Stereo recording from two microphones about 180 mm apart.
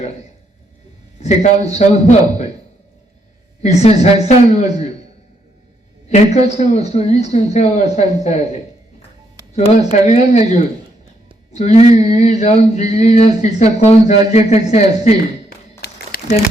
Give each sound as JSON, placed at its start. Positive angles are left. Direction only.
{"t": 1.2, "sound": "speech", "side_deg": 40}
{"t": 3.6, "sound": "speech", "side_deg": 40}
{"t": 6.1, "sound": "speech", "side_deg": 40}
{"t": 9.6, "sound": "speech", "side_deg": 40}
{"t": 15.8, "sound": "crumpling", "side_deg": 65}